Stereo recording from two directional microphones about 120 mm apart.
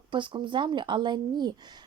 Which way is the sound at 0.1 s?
40° right (ahead or behind).